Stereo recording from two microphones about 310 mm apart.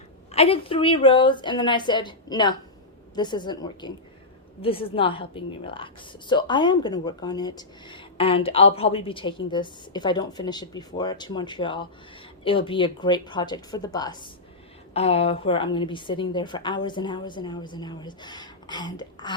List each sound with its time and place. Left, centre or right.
0.3 s a woman's voice: centre